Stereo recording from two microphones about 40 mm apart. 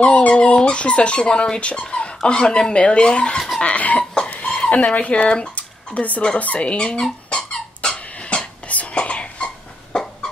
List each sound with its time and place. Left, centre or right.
0.0 s speech: left
3.6 s a sound: left
4.3 s speech: left
5.5 s a sound: left
6.4 s speech: left
6.9 s squeak: centre
8.6 s whispering: left